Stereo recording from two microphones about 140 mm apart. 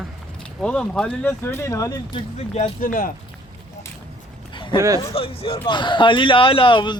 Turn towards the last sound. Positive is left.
turn(degrees=35)  # may be behind; listen again after turning